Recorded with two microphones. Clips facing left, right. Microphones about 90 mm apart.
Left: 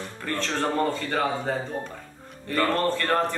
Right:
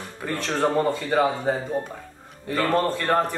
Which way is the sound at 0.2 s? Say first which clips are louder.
Right 4 dB; 10° right (ahead or behind).